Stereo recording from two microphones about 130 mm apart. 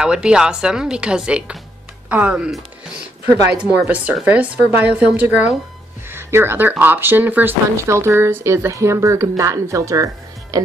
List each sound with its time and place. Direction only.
0.0 s a woman's voice: 5° right (ahead or behind); by 10.6 s 25° right (ahead or behind)